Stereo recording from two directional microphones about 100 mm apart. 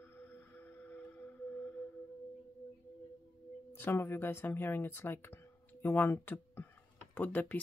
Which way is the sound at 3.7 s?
20° left (ahead or behind).